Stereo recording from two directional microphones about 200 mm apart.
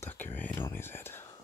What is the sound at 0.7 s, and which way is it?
Speech, 10° left (ahead or behind).